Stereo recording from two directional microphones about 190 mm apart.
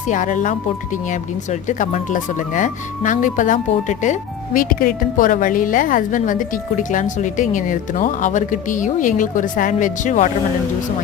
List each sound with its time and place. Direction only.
0.1 s speech: 40° left (ahead or behind)